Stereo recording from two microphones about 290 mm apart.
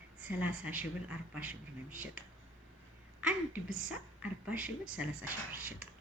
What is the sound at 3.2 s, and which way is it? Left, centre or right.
A woman's voice, centre.